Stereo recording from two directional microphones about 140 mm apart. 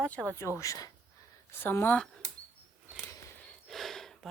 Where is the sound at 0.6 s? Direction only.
25° left (ahead or behind); by 2.2 s 5° left (ahead or behind).